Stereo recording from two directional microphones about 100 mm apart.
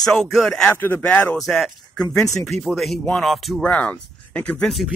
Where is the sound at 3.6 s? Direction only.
15° left (ahead or behind).